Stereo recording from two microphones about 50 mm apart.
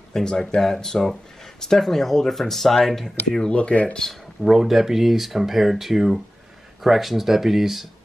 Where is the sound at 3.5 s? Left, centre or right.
Left.